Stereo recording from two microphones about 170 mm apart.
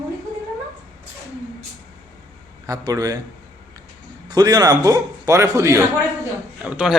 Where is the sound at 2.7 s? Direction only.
20° right (ahead or behind).